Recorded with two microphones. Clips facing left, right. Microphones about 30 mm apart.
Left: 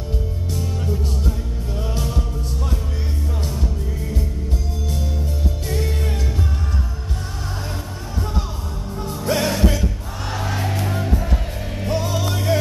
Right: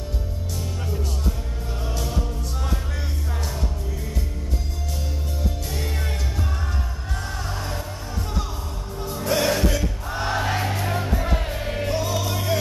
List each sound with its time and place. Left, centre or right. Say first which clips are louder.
9.2 s music: left 1 dB; centre
10.2 s music: right 2 dB; right
11.9 s music: left 4 dB; centre